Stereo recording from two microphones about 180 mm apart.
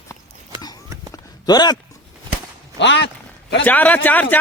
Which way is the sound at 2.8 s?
80° left.